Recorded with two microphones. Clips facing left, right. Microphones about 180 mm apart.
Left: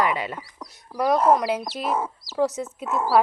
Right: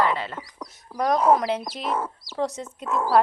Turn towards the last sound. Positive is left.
turn(degrees=5)  # may be behind; listen again after turning